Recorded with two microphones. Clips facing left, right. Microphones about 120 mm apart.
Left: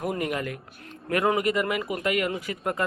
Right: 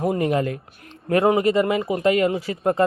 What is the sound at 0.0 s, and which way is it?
A man's voice, 30° right (ahead or behind).